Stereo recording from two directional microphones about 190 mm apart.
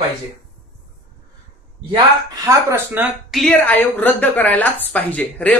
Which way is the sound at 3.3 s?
Centre (ahead or behind).